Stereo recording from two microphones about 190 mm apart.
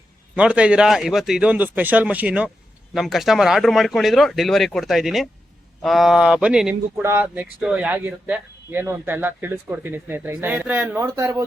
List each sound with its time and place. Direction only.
0.3 s speech: 5° right (ahead or behind)